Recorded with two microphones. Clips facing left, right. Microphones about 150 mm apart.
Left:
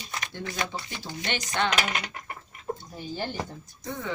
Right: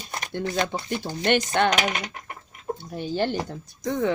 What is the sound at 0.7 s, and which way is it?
Speech, 55° right (ahead or behind).